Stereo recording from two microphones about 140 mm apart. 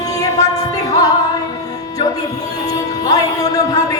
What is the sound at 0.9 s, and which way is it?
Music, 25° left (ahead or behind).